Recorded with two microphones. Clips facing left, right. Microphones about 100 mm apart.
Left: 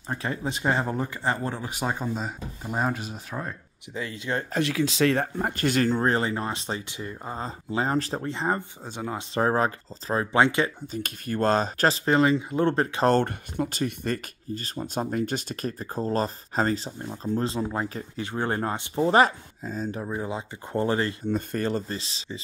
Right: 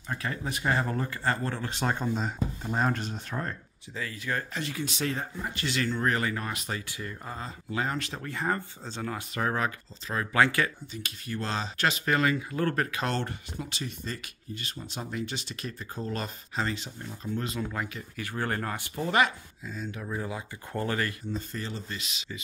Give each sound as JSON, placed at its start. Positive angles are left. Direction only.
{"t": 0.1, "sound": "speech", "side_deg": 25}
{"t": 3.9, "sound": "speech", "side_deg": 20}
{"t": 4.6, "sound": "speech", "side_deg": 85}
{"t": 6.0, "sound": "speech", "side_deg": 25}
{"t": 8.3, "sound": "speech", "side_deg": 20}
{"t": 9.3, "sound": "speech", "side_deg": 30}
{"t": 10.9, "sound": "speech", "side_deg": 45}
{"t": 11.9, "sound": "speech", "side_deg": 30}
{"t": 13.0, "sound": "speech", "side_deg": 50}
{"t": 14.5, "sound": "speech", "side_deg": 40}
{"t": 18.2, "sound": "speech", "side_deg": 20}
{"t": 20.1, "sound": "speech", "side_deg": 20}
{"t": 21.3, "sound": "speech", "side_deg": 55}
{"t": 21.9, "sound": "speech", "side_deg": 30}